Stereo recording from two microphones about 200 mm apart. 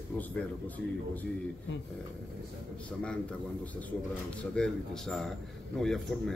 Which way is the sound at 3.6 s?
5° left (ahead or behind).